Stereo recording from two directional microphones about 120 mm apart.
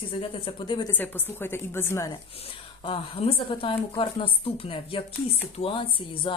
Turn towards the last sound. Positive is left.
turn(degrees=45)  # may be behind; listen again after turning